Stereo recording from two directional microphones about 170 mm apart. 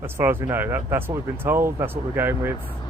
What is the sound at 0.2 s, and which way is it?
Speech, 10° right (ahead or behind).